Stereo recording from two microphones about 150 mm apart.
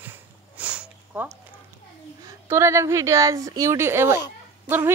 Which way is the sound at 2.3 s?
20° right (ahead or behind).